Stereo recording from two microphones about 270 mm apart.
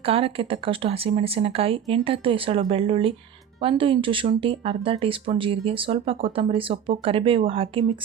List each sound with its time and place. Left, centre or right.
0.0 s speech: right